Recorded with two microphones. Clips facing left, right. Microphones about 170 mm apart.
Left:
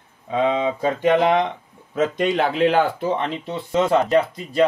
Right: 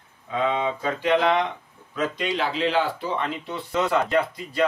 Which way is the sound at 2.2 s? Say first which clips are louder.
Left 8 dB; 50° left (ahead or behind).